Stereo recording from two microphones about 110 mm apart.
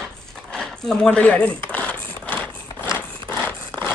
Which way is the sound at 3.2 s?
15° left (ahead or behind).